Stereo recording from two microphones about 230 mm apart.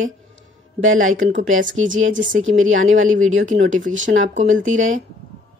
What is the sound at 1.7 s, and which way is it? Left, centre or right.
A woman's voice, right.